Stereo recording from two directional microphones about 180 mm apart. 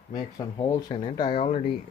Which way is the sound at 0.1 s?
20° left (ahead or behind).